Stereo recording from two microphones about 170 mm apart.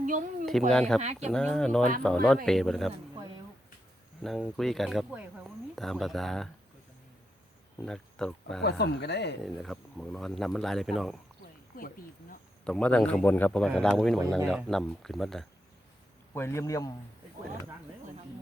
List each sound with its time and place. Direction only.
0.0 s a sound: 50° right (ahead or behind)
0.7 s speech: 5° left (ahead or behind)
4.2 s speech: centre (ahead or behind)
7.8 s speech: 5° left (ahead or behind)
8.8 s speech: 80° left
9.4 s speech: centre (ahead or behind)
11.7 s speech: 55° left (ahead or behind)
12.6 s speech: 5° left (ahead or behind)
14.2 s speech: 15° right (ahead or behind)
14.5 s speech: centre (ahead or behind)
16.3 s a man's voice: 15° left (ahead or behind)